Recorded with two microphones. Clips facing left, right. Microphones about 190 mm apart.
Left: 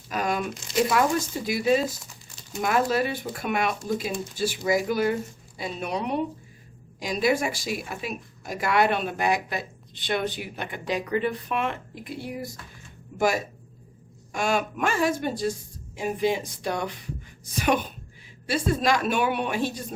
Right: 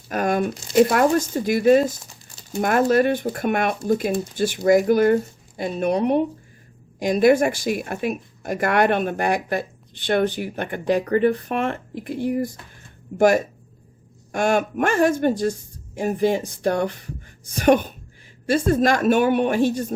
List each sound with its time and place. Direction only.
0.1 s speech: 50° right (ahead or behind)